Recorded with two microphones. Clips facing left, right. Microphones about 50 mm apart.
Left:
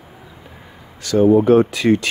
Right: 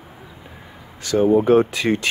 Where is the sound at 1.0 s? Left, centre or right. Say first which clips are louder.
Left 3 dB; right.